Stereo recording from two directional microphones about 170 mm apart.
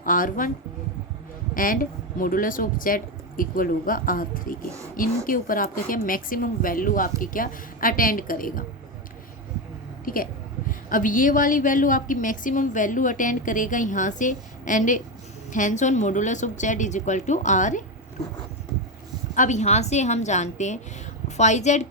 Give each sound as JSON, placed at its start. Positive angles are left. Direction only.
{"t": 0.0, "sound": "a woman's voice", "side_deg": 55}
{"t": 1.5, "sound": "speech", "side_deg": 55}
{"t": 10.1, "sound": "a woman's voice", "side_deg": 55}
{"t": 19.3, "sound": "a woman's voice", "side_deg": 45}